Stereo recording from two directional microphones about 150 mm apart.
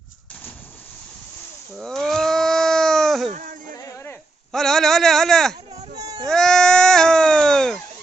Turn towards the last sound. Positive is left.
turn(degrees=5)  # may be behind; listen again after turning